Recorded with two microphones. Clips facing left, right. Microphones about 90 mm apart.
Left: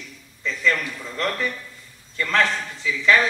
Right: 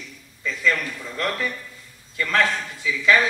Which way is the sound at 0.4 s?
10° right (ahead or behind).